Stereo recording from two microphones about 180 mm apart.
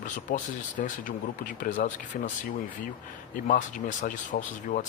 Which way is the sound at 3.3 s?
50° left (ahead or behind).